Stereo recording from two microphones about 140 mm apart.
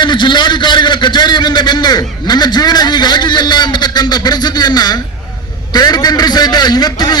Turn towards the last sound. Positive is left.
turn(degrees=30)  # may be behind; listen again after turning